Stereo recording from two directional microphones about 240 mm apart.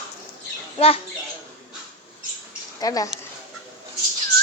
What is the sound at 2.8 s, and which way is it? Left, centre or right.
Speech, centre.